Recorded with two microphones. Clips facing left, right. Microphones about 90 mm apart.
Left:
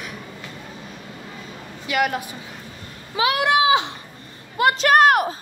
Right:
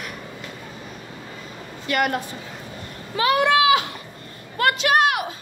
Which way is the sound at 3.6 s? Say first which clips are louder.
Even; 25° left (ahead or behind).